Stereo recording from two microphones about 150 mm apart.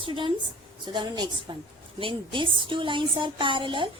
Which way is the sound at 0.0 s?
35° right (ahead or behind).